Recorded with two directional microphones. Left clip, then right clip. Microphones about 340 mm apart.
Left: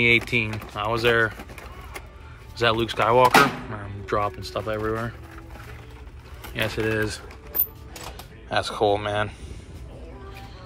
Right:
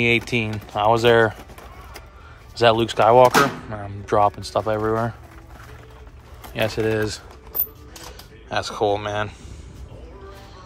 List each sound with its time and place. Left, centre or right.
0.0 s speech: centre
2.6 s speech: centre
6.5 s speech: centre
8.5 s speech: centre